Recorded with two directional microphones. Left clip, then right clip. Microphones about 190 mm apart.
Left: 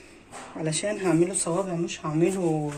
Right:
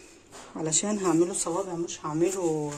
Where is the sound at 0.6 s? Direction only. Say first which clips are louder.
Left 1 dB; 45° right (ahead or behind).